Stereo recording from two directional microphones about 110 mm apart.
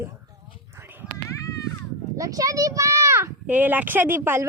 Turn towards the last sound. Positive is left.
turn(degrees=-20)  # may be behind; listen again after turning